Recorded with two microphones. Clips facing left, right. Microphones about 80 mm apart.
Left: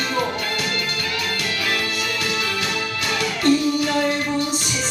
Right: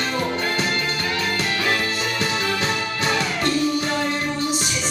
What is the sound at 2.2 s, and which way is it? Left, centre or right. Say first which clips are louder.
Music: right 4 dB; right.